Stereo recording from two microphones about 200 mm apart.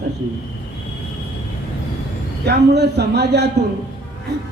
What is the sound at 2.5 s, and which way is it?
A man's voice, 55° right (ahead or behind).